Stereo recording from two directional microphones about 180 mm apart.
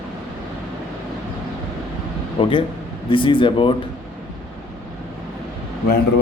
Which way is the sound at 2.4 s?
30° left (ahead or behind).